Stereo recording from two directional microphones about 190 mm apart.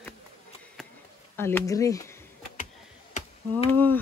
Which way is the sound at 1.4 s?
10° left (ahead or behind).